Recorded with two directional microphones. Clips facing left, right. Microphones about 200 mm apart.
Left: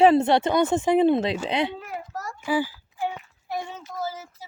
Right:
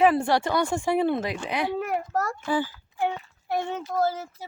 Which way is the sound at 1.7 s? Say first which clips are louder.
Right 8 dB; 65° right (ahead or behind).